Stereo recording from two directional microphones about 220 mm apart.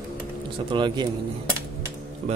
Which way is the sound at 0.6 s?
20° right (ahead or behind).